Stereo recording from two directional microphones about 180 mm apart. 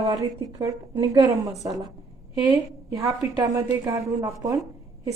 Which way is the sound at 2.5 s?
20° right (ahead or behind).